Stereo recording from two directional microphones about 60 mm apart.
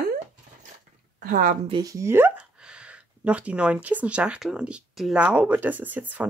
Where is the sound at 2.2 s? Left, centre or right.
Centre.